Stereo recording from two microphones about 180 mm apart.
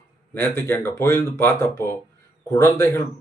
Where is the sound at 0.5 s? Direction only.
15° left (ahead or behind).